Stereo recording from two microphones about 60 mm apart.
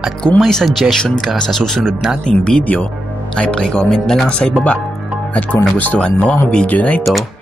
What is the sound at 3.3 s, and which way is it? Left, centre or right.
Speech, centre.